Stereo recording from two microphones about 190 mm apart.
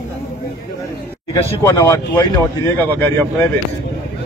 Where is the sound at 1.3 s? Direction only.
15° left (ahead or behind).